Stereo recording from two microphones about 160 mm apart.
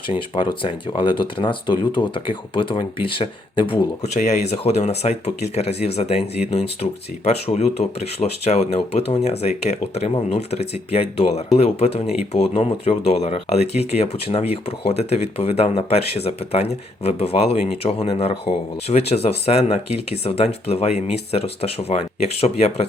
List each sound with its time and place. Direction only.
0.3 s speech: 30° left (ahead or behind)
4.0 s speech: 45° left (ahead or behind)